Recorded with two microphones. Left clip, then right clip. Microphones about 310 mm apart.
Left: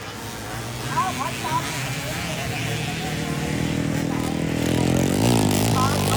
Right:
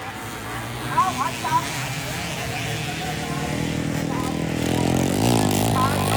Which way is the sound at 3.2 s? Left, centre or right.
Centre.